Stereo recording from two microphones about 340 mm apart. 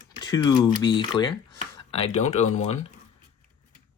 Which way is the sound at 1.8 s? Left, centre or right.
Centre.